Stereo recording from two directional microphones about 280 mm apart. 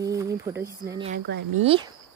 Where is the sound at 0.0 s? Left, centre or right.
Centre.